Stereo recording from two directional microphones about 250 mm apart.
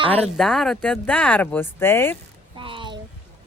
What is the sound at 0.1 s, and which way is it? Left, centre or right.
Speech, centre.